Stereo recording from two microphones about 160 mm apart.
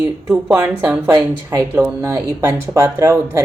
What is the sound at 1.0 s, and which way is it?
Speech, 20° right (ahead or behind).